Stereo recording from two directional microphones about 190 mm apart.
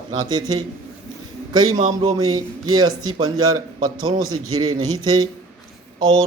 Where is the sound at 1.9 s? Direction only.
20° right (ahead or behind).